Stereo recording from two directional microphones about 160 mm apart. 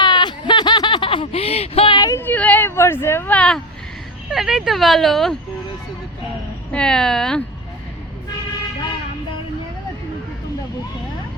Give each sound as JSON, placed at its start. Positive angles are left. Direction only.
{"t": 0.0, "sound": "a sound", "side_deg": 25}
{"t": 4.3, "sound": "speech", "side_deg": 0}
{"t": 6.7, "sound": "speech", "side_deg": 5}